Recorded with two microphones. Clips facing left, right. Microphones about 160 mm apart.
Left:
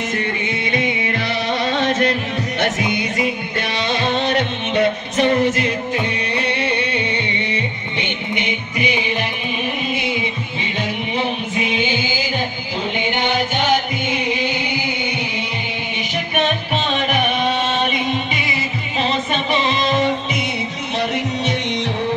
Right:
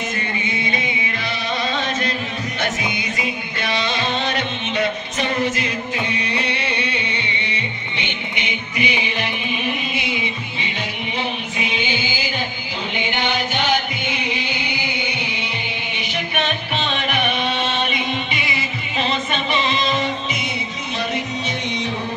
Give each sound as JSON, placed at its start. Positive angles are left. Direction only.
{"t": 0.4, "sound": "music", "side_deg": 65}
{"t": 11.1, "sound": "music", "side_deg": 50}
{"t": 21.1, "sound": "music", "side_deg": 75}